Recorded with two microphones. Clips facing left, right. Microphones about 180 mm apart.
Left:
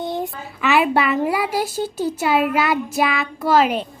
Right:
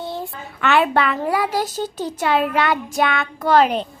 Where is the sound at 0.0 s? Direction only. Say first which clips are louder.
Left 4 dB; 15° left (ahead or behind).